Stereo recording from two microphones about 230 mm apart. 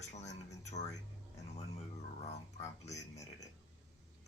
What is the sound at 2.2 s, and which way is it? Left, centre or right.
Speech, left.